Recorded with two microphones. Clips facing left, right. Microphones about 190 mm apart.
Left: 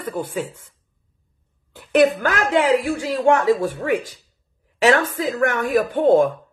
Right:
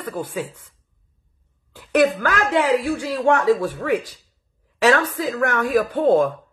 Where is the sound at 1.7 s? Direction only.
20° left (ahead or behind).